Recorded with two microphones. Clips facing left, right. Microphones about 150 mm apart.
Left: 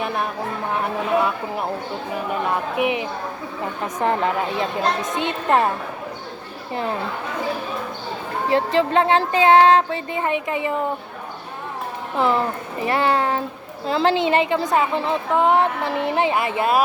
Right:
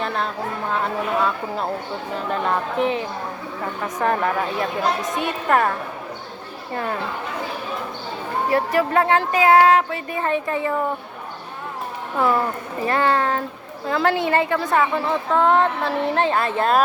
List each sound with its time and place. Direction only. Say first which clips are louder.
0.0 s a woman's voice: even; 15° left (ahead or behind)
8.4 s speech: left 2 dB; 20° left (ahead or behind)
12.1 s a woman's voice: even; 20° left (ahead or behind)